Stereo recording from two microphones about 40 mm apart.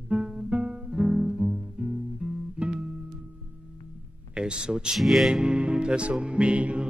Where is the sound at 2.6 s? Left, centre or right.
Right.